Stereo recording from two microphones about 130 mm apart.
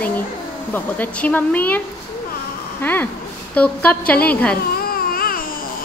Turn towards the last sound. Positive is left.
turn(degrees=90)